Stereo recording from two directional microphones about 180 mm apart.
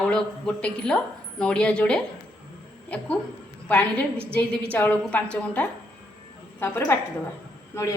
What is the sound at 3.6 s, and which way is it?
A woman's voice, 10° left (ahead or behind).